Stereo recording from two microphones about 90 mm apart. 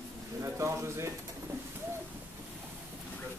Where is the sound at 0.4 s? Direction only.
30° right (ahead or behind).